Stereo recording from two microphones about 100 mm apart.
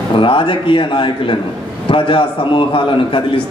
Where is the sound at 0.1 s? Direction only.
60° left (ahead or behind).